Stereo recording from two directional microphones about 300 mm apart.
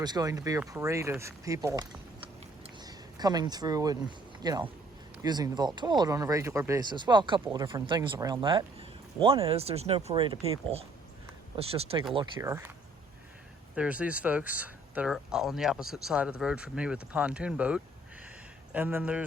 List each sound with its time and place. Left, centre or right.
0.0 s speech: centre
2.6 s a sound: centre
4.4 s speech: centre
13.7 s speech: centre